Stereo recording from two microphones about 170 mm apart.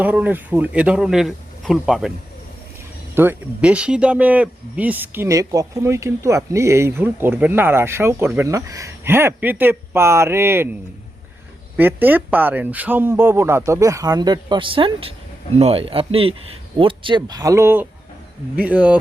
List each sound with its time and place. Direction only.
0.0 s speech: 10° right (ahead or behind)
3.2 s speech: 10° right (ahead or behind)
11.8 s speech: 10° right (ahead or behind)